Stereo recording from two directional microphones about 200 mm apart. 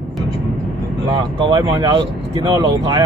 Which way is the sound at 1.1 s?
25° right (ahead or behind).